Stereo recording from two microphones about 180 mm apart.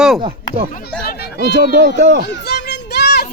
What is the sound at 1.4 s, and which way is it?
Speech, 70° right (ahead or behind).